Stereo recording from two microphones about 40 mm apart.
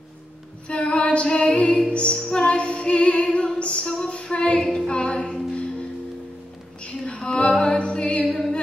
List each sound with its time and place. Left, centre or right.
0.7 s music: left
6.8 s a sound: left
7.2 s music: left
8.3 s music: centre